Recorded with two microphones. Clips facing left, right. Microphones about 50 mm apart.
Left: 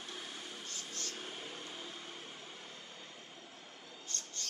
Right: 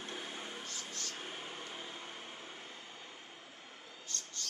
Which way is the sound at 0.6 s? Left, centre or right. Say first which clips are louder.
Right 1 dB; right.